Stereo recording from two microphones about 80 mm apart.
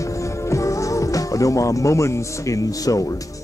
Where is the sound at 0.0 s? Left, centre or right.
Left.